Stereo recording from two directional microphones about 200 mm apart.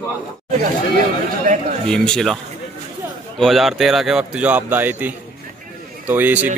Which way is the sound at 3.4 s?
Centre (ahead or behind).